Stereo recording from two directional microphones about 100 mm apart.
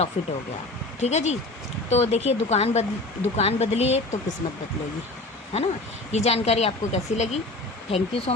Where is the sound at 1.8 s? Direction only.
90° left.